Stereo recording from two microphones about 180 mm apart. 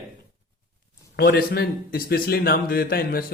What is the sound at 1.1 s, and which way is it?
A man's voice, 60° left (ahead or behind).